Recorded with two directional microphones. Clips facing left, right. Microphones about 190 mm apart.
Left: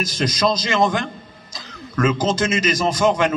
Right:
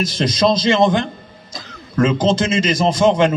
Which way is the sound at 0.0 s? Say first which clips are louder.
Right 4 dB; 30° right (ahead or behind).